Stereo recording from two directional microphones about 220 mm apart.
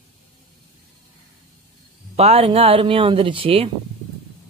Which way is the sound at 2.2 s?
25° right (ahead or behind).